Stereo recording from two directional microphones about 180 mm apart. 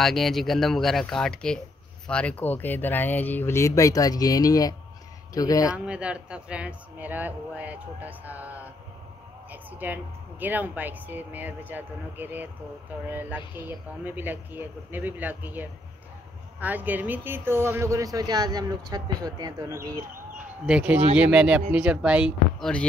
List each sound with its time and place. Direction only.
0.0 s speech: centre (ahead or behind); by 5.8 s 20° left (ahead or behind)
5.9 s a woman's voice: 5° right (ahead or behind)
20.3 s a sound: 5° right (ahead or behind)
21.1 s speech: 5° right (ahead or behind)